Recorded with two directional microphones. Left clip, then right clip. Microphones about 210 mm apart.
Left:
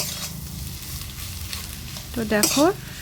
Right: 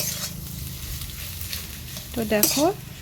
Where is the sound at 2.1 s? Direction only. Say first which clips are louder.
Left 1 dB; centre (ahead or behind).